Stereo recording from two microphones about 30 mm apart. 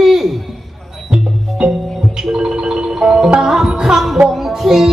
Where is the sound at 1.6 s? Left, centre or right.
Right.